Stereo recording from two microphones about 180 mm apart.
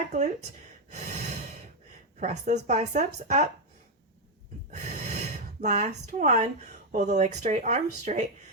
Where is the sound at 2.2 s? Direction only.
40° right (ahead or behind).